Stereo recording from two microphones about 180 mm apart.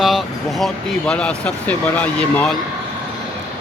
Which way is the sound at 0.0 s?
Centre (ahead or behind).